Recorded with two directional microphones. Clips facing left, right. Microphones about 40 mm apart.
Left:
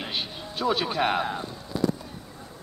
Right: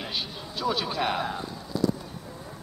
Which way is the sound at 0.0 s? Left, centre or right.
Left.